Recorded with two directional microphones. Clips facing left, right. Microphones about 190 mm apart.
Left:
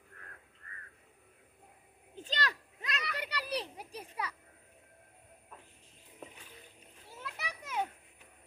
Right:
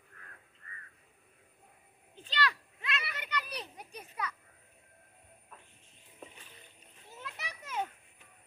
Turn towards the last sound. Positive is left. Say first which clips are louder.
# left 1 dB
turn(degrees=10)  # may be behind; listen again after turning